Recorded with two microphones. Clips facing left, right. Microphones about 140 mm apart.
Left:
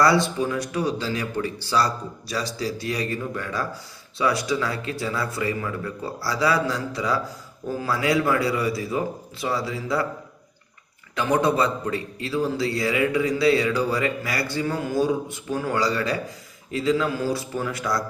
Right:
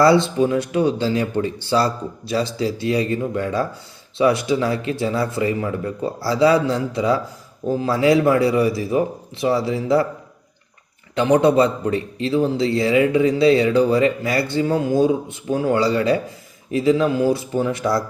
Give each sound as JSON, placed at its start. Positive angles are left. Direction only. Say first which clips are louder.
{"t": 0.0, "sound": "a man's voice", "louder": "right 5 dB", "side_deg": -25}
{"t": 11.1, "sound": "a man's voice", "louder": "right 6 dB", "side_deg": -25}